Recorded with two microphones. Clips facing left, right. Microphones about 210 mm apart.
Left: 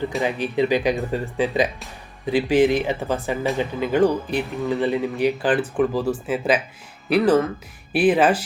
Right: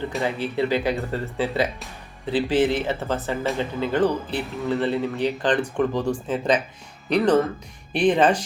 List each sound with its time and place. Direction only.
0.2 s speech: 15° left (ahead or behind)